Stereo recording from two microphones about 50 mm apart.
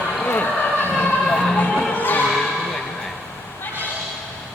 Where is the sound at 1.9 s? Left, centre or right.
Left.